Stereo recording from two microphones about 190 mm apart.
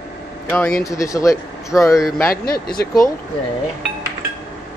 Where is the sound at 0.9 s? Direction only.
15° left (ahead or behind).